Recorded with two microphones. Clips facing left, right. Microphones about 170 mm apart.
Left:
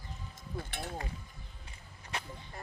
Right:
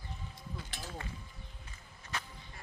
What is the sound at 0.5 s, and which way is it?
Speech, 60° left (ahead or behind).